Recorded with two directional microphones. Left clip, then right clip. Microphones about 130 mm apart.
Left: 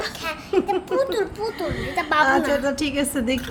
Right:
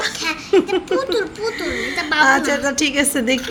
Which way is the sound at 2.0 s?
70° left (ahead or behind).